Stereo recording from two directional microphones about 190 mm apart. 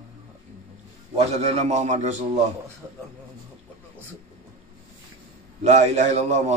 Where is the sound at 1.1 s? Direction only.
35° right (ahead or behind).